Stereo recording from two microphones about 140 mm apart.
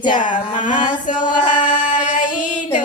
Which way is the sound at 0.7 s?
35° left (ahead or behind).